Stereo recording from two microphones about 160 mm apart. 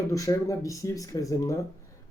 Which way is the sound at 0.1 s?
20° left (ahead or behind).